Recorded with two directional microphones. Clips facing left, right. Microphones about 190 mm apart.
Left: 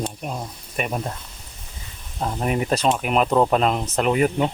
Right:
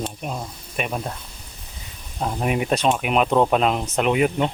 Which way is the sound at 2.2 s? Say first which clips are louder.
Even; 5° right (ahead or behind).